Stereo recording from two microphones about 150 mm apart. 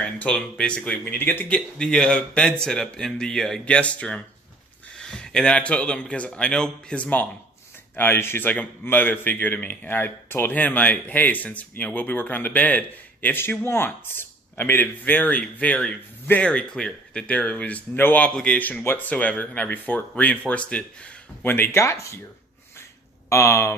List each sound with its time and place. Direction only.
0.0 s speech: 5° left (ahead or behind)
23.3 s speech: 20° left (ahead or behind)